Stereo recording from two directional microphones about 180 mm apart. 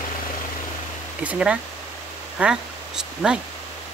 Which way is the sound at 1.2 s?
5° right (ahead or behind).